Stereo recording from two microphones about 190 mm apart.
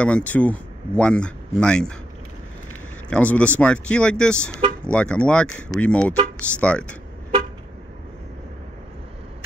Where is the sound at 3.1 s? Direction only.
5° left (ahead or behind).